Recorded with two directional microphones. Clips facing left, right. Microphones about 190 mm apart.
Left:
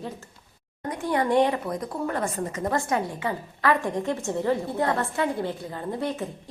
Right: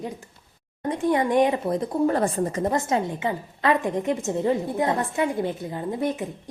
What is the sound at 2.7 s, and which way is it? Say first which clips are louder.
A woman's voice: right 2 dB; 20° right (ahead or behind).